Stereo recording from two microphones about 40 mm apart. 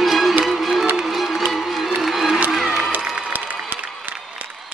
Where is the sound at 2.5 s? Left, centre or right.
Centre.